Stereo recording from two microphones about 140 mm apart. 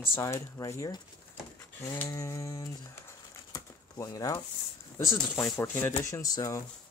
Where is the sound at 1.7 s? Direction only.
20° left (ahead or behind).